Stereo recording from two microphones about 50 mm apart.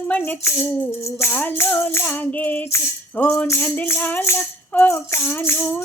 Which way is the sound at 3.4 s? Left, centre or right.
Left.